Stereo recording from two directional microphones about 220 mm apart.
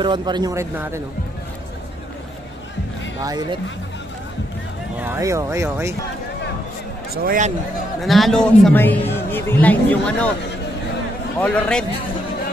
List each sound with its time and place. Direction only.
0.0 s speech: 20° right (ahead or behind)
3.2 s speech: 15° right (ahead or behind)
4.9 s speech: 10° right (ahead or behind)
7.2 s a man's voice: 40° right (ahead or behind)
8.0 s a man's voice: centre (ahead or behind)
11.3 s a man's voice: 5° left (ahead or behind)